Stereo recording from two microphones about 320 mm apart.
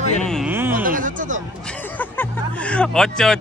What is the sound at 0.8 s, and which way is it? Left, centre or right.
Speech, right.